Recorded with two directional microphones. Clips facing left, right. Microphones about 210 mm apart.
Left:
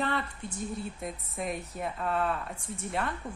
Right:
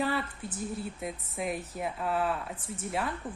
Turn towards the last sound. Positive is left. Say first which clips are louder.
# even
turn(degrees=-5)  # may be behind; listen again after turning